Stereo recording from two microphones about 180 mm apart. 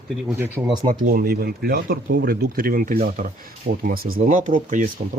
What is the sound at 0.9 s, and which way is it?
Speech, 55° right (ahead or behind).